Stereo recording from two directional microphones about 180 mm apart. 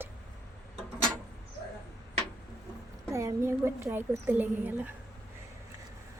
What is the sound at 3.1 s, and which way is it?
A woman's voice, 15° right (ahead or behind).